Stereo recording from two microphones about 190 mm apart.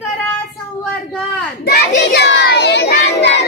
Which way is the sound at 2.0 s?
65° left (ahead or behind).